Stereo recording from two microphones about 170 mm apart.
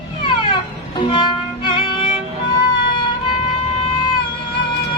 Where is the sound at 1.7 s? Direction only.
30° left (ahead or behind).